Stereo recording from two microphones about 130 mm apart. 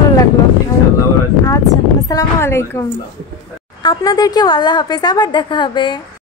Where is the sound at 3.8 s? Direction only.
30° left (ahead or behind).